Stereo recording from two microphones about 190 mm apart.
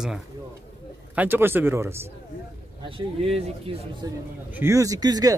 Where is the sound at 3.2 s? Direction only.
30° right (ahead or behind).